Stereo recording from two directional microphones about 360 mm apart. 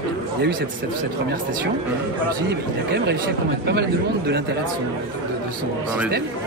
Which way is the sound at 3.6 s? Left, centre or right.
Right.